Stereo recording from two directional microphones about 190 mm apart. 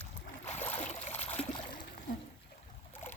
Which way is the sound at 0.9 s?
35° left (ahead or behind).